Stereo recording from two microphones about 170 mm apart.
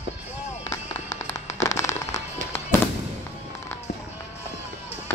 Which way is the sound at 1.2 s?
15° left (ahead or behind).